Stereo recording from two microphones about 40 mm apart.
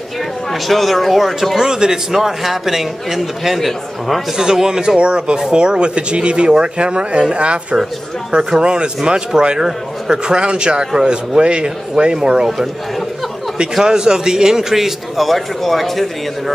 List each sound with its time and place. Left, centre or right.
0.5 s speech: centre
1.7 s a man's voice: centre
4.4 s a man's voice: centre
13.8 s a man's voice: centre